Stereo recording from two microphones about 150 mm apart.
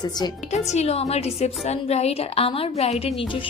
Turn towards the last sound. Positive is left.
turn(degrees=35)  # may be behind; listen again after turning